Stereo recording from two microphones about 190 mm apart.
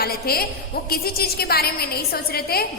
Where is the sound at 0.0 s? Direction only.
55° left (ahead or behind).